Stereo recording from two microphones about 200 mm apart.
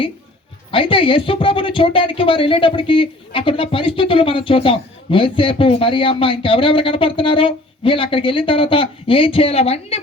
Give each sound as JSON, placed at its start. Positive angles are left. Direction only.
{"t": 0.7, "sound": "speech", "side_deg": 25}